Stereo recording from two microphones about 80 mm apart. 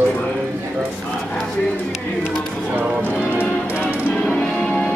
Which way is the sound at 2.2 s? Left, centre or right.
Right.